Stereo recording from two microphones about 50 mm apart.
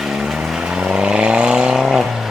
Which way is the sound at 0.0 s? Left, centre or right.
Centre.